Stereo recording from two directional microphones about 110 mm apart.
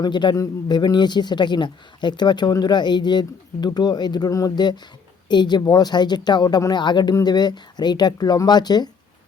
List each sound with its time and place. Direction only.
0.0 s a man's voice: 45° left (ahead or behind)
0.3 s a man's voice: 30° left (ahead or behind)
0.8 s speech: 40° left (ahead or behind)